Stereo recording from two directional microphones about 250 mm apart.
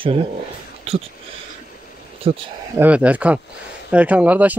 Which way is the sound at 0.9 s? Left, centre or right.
Right.